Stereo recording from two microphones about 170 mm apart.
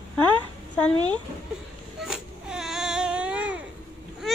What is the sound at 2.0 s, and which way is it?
Baby cry, 5° right (ahead or behind).